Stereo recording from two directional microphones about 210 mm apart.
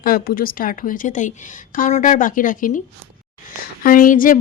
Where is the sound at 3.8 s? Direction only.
40° left (ahead or behind).